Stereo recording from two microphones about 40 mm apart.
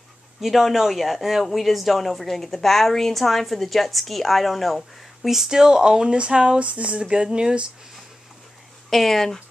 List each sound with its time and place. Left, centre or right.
0.4 s speech: centre; by 7.6 s right
8.9 s speech: centre